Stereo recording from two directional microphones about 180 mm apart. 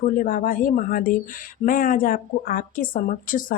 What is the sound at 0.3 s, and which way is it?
A woman's voice, 50° left (ahead or behind).